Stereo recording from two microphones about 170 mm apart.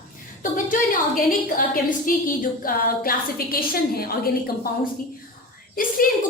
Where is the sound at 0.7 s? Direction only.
55° left (ahead or behind).